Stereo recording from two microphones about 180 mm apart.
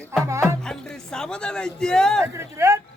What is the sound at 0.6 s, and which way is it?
A man's voice, 5° left (ahead or behind).